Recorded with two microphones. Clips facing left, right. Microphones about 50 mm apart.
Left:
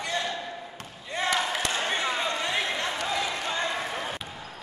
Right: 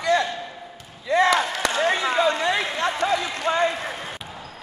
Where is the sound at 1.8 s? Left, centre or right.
Right.